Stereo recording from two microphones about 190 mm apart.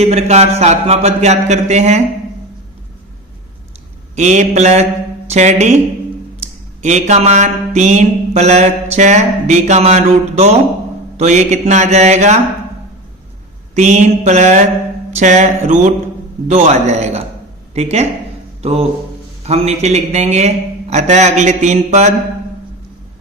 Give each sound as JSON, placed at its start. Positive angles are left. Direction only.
{"t": 0.0, "sound": "mantra", "side_deg": -30}
{"t": 4.1, "sound": "mantra", "side_deg": -40}
{"t": 6.8, "sound": "mantra", "side_deg": -35}
{"t": 13.7, "sound": "mantra", "side_deg": -35}
{"t": 18.6, "sound": "speech", "side_deg": -35}
{"t": 19.4, "sound": "mantra", "side_deg": -35}